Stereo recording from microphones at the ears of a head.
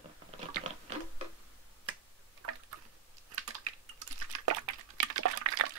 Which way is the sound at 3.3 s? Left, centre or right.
Right.